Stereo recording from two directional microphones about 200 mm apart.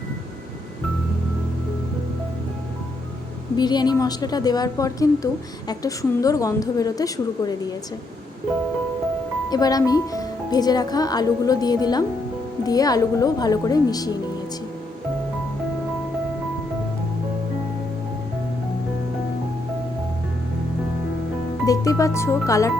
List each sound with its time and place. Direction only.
3.6 s a woman's voice: 20° left (ahead or behind)
9.5 s a woman's voice: 20° left (ahead or behind)
21.7 s speech: 15° left (ahead or behind)